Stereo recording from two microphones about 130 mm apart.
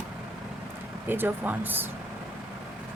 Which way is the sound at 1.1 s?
15° right (ahead or behind).